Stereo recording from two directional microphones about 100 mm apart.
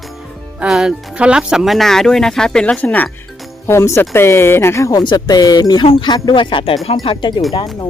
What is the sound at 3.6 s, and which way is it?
Speech, 25° left (ahead or behind).